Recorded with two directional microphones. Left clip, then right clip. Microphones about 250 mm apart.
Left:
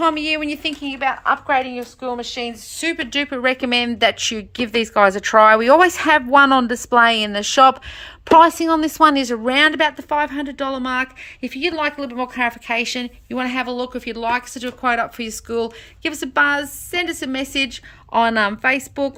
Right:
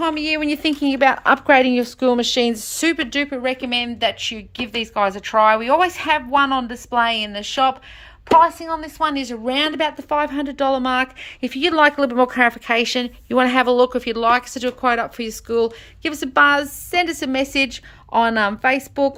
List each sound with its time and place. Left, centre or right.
0.0 s a woman's voice: centre
0.8 s speech: right
2.7 s a woman's voice: centre